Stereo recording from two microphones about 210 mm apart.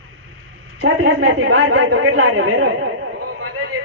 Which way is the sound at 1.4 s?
75° right (ahead or behind).